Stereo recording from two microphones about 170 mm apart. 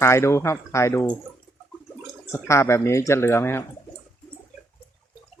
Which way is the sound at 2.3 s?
15° left (ahead or behind).